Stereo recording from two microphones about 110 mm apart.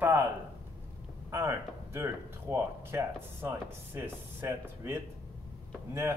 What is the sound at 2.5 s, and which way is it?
Speech, 25° right (ahead or behind).